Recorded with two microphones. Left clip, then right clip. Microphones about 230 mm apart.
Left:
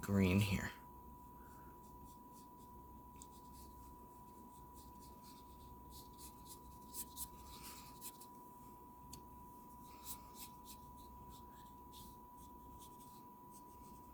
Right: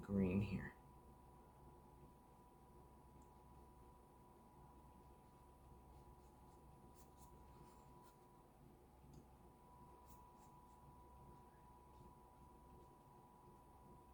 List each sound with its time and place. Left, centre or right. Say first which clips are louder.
0.0 s speech: left 6 dB; left